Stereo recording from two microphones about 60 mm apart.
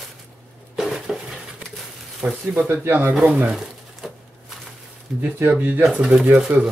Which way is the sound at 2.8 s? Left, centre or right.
Right.